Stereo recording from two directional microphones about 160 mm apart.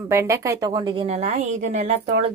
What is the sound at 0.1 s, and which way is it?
Speech, 20° right (ahead or behind).